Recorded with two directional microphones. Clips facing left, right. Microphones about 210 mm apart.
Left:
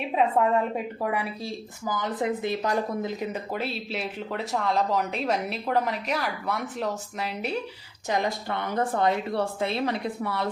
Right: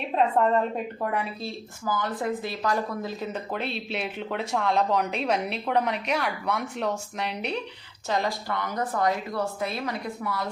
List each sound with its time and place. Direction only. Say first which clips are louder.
0.1 s a woman's voice: right 1 dB; 5° left (ahead or behind)
8.0 s speech: even; 15° left (ahead or behind)